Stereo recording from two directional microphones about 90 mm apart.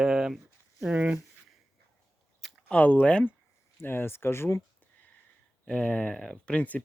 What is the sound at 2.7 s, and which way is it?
Speech, 15° left (ahead or behind).